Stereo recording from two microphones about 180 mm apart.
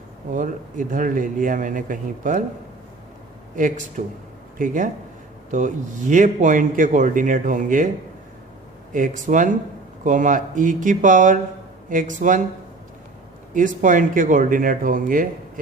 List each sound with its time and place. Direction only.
0.3 s a man's voice: 45° right (ahead or behind)
3.5 s a man's voice: 45° right (ahead or behind)
8.9 s a man's voice: 45° right (ahead or behind)
13.5 s a man's voice: 45° right (ahead or behind)